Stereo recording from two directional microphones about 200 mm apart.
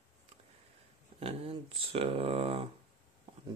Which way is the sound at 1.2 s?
30° right (ahead or behind).